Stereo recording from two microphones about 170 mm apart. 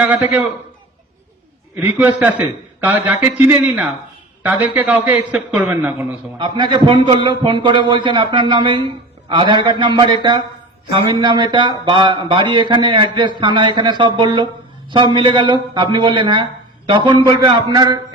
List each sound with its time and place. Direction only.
0.0 s a man's voice: 10° right (ahead or behind)
1.7 s a man's voice: 10° right (ahead or behind)
3.4 s a man's voice: 10° right (ahead or behind)
6.4 s a man's voice: 25° right (ahead or behind)